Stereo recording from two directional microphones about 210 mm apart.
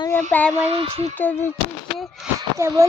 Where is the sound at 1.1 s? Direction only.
10° left (ahead or behind).